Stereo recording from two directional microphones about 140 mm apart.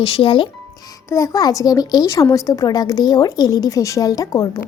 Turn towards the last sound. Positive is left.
turn(degrees=20)  # may be behind; listen again after turning